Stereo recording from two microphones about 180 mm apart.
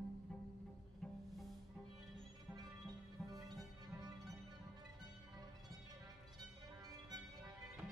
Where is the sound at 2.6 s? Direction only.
20° right (ahead or behind).